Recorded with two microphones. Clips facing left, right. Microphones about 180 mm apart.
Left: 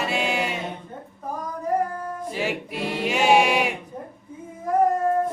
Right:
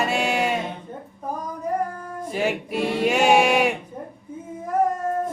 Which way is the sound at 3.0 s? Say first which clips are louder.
Right 1 dB; 50° right (ahead or behind).